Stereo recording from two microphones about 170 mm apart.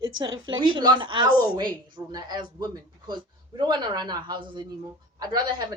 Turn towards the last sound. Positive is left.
turn(degrees=-25)  # may be behind; listen again after turning